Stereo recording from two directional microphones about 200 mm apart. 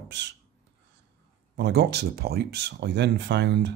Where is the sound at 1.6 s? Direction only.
55° right (ahead or behind).